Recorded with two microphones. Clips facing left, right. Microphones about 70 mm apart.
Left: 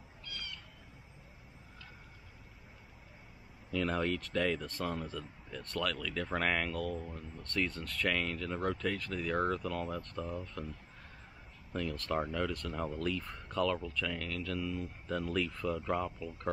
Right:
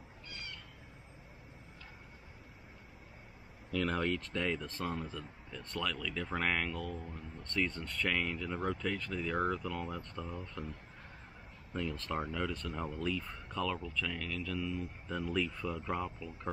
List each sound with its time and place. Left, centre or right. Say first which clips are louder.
0.2 s a sound: left 2 dB; right
3.7 s speech: even; centre
12.2 s speech: left 2 dB; centre